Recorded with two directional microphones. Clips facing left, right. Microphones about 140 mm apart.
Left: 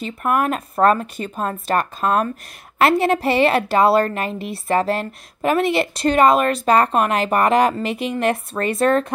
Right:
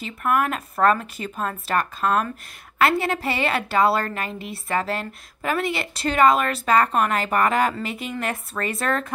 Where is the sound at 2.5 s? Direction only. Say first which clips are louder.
Left 4 dB; 50° left (ahead or behind).